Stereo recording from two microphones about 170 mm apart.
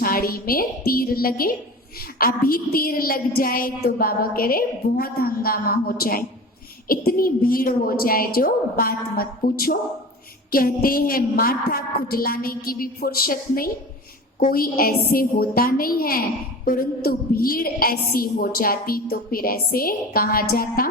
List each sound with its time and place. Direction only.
0.0 s a woman's voice: 60° left (ahead or behind)